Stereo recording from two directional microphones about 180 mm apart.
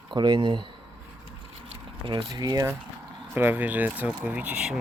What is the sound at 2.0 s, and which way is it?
Speech, 20° right (ahead or behind).